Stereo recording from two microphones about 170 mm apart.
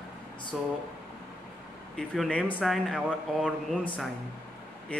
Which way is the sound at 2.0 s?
5° left (ahead or behind).